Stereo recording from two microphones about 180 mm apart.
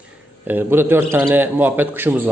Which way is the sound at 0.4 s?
10° right (ahead or behind).